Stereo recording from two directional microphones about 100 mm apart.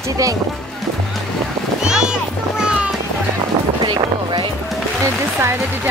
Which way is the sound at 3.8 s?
55° right (ahead or behind).